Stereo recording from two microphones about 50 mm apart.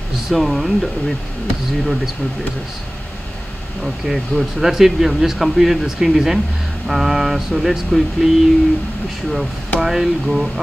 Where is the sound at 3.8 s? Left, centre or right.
Centre.